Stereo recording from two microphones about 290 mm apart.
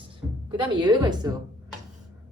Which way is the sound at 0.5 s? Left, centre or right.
Centre.